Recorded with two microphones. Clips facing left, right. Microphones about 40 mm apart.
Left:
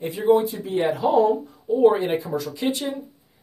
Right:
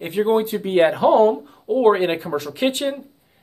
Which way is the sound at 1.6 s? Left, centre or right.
Right.